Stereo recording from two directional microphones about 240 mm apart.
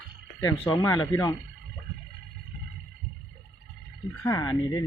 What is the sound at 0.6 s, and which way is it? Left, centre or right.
Speech, centre.